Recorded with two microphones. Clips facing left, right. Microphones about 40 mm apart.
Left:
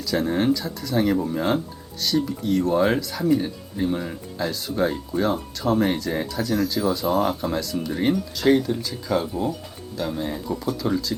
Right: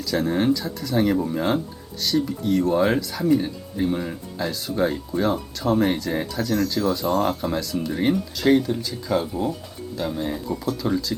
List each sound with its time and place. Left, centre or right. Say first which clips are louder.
0.0 s speech: even; centre